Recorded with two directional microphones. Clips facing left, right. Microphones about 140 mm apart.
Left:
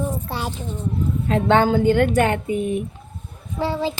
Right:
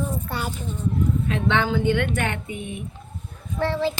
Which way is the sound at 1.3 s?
40° left (ahead or behind).